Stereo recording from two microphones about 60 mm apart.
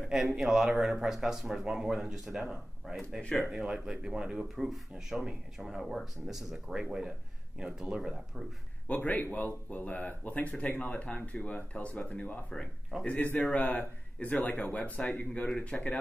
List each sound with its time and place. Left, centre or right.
0.1 s a man's voice: centre
3.3 s speech: centre
3.6 s speech: centre
6.7 s speech: centre
8.8 s speech: left